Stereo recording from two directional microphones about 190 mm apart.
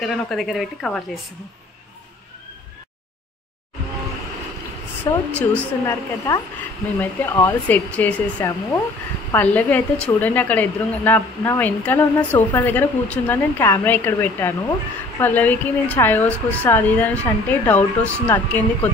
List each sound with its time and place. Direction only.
0.0 s a woman's voice: centre (ahead or behind)
5.1 s a woman's voice: 15° left (ahead or behind)